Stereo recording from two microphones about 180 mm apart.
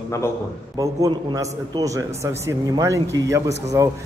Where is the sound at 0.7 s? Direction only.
20° right (ahead or behind).